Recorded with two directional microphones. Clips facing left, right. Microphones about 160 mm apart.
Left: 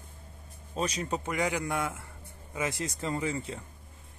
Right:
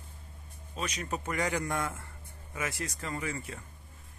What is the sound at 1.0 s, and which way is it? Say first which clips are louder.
A man's voice: left 2 dB; 20° left (ahead or behind).